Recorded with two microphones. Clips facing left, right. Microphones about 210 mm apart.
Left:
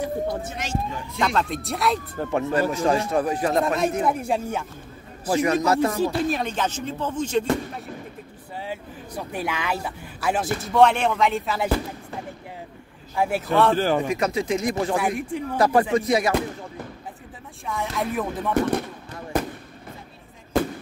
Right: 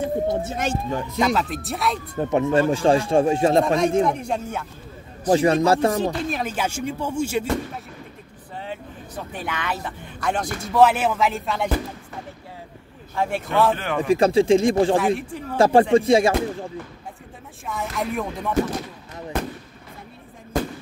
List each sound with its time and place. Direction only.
0.0 s speech: 25° right (ahead or behind)
0.6 s speech: 50° right (ahead or behind)
1.2 s speech: 5° right (ahead or behind)
2.1 s speech: 20° right (ahead or behind)
3.6 s speech: 5° left (ahead or behind)
5.3 s music: 30° right (ahead or behind)
6.2 s speech: 5° right (ahead or behind)
8.5 s speech: 10° left (ahead or behind)
13.1 s speech: 10° left (ahead or behind)
13.7 s a man's voice: 35° left (ahead or behind)
14.0 s speech: 30° right (ahead or behind)
17.6 s speech: centre (ahead or behind)